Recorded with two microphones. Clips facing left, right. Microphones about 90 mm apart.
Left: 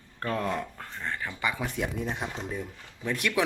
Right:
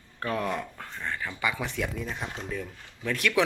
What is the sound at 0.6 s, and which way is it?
Speech, 20° left (ahead or behind).